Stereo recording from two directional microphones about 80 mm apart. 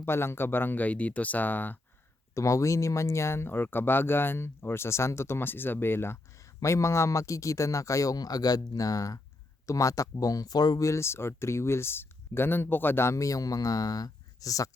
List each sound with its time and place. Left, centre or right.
0.0 s speech: left
2.3 s speech: left
10.8 s speech: left